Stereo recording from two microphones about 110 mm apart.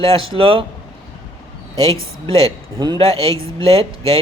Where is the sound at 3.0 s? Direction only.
60° right (ahead or behind).